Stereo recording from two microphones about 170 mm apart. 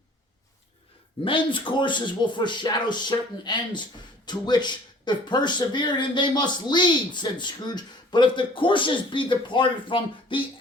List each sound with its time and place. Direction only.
1.2 s speech: 30° left (ahead or behind)